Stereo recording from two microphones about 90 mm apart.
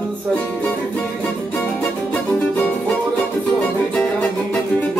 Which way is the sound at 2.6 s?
15° left (ahead or behind).